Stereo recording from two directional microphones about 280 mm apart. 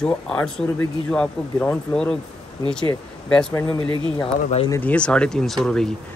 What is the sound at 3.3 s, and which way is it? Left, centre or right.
Speech, centre.